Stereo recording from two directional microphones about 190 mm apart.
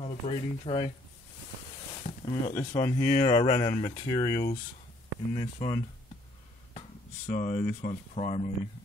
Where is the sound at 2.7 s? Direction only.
15° left (ahead or behind).